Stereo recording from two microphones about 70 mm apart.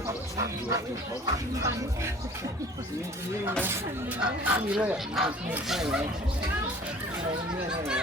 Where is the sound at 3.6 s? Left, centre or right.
Right.